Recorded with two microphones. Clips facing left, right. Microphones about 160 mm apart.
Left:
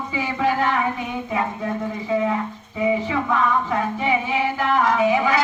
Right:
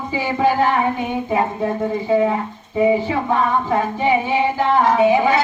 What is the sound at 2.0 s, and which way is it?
A woman's voice, 30° right (ahead or behind).